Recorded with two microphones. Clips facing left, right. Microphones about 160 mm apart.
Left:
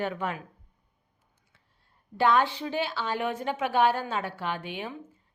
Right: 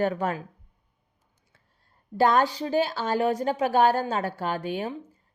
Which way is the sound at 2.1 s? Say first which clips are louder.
Right 2 dB; 40° right (ahead or behind).